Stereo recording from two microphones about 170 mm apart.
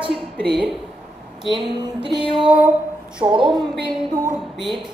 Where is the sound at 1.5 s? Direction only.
25° right (ahead or behind).